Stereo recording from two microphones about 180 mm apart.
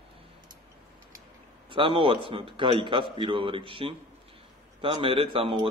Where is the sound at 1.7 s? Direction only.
30° right (ahead or behind).